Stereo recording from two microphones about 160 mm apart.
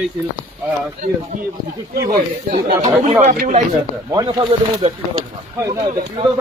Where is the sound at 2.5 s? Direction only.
30° right (ahead or behind).